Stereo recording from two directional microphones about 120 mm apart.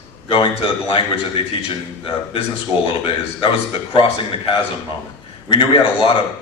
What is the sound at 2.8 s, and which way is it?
A man's voice, 45° left (ahead or behind).